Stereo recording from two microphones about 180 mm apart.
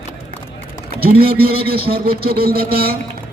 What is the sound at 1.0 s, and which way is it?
A man's voice, 60° right (ahead or behind).